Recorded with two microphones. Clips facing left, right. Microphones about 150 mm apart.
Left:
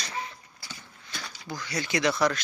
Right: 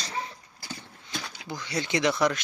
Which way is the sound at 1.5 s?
25° right (ahead or behind).